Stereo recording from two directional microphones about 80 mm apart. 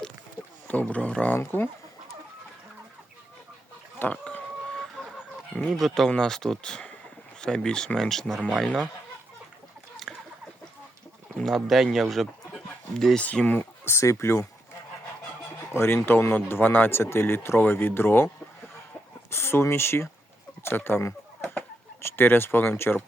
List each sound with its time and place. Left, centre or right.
0.7 s speech: centre
1.4 s speech: left
4.1 s chicken: centre
5.5 s speech: centre
10.1 s chicken: centre
11.3 s speech: centre
13.1 s speech: centre; by 14.4 s left
15.7 s speech: left
19.3 s speech: left